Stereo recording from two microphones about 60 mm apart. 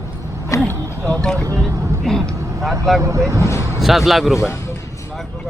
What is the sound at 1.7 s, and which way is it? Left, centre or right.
Speech, right.